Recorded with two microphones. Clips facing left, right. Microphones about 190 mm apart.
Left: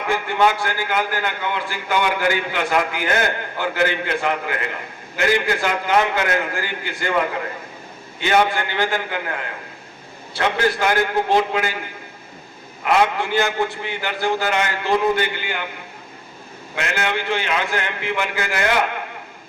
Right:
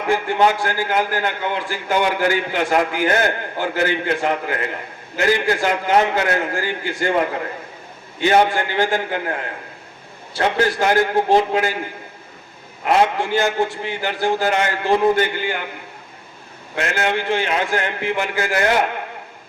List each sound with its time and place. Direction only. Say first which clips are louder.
0.1 s a man's voice: right 2 dB; 40° right (ahead or behind)
8.2 s a man's voice: right 3 dB; 35° right (ahead or behind)
12.8 s a man's voice: right 1 dB; 35° right (ahead or behind)
16.7 s a man's voice: right 3 dB; 40° right (ahead or behind)